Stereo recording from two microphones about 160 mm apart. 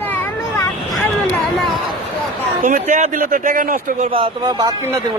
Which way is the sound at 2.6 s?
50° right (ahead or behind).